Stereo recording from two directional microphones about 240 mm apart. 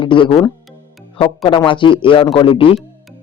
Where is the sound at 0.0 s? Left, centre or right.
Left.